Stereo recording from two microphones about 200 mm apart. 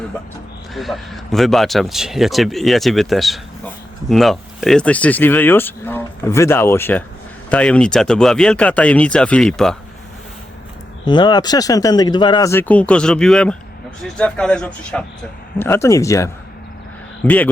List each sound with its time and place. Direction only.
0.7 s speech: centre (ahead or behind)
11.0 s speech: 20° left (ahead or behind)